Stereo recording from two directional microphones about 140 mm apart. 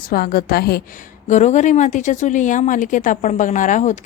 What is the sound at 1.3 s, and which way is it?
A woman's voice, 60° left (ahead or behind).